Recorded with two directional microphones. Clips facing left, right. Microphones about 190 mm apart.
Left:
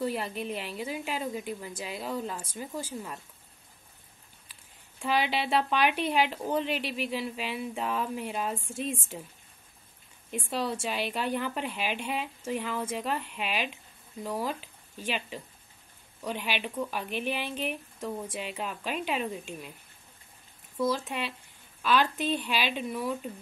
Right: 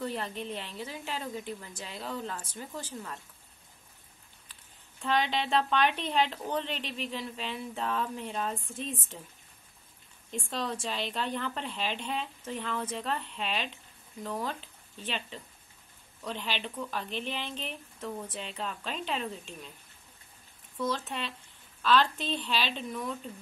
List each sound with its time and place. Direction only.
0.0 s a woman's voice: 10° left (ahead or behind)
5.0 s a woman's voice: 10° left (ahead or behind)
10.3 s a woman's voice: 10° left (ahead or behind)
20.7 s a woman's voice: 10° left (ahead or behind)